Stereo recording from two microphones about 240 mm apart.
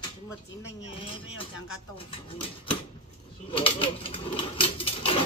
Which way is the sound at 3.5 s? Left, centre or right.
Left.